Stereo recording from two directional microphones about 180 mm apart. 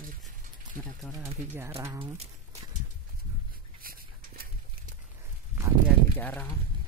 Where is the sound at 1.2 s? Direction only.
15° right (ahead or behind).